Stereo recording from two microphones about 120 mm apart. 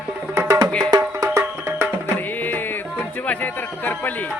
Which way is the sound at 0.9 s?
35° right (ahead or behind).